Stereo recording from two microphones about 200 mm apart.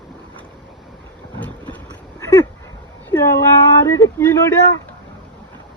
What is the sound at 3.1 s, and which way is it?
Speech, 15° left (ahead or behind).